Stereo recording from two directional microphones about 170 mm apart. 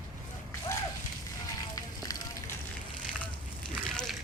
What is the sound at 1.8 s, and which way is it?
Fire, 20° left (ahead or behind).